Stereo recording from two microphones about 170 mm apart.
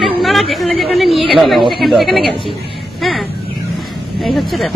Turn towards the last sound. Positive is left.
turn(degrees=0)  # may be behind; listen again after turning